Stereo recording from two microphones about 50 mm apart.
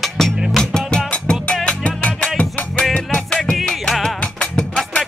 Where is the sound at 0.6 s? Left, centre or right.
Centre.